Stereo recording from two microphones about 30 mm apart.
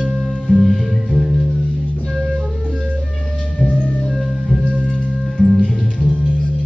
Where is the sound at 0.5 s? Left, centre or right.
Centre.